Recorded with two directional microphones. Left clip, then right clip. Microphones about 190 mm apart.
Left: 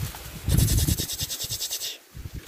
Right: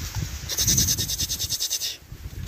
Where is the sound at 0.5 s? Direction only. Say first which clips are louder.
Right 7 dB; 15° left (ahead or behind).